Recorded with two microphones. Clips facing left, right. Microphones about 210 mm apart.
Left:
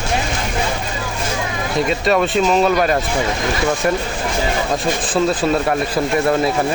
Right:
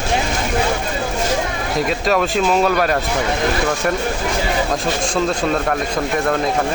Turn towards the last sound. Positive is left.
turn(degrees=10)  # may be behind; listen again after turning